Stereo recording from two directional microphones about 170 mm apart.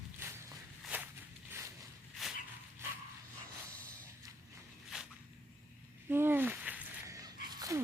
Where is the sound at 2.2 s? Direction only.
Centre (ahead or behind).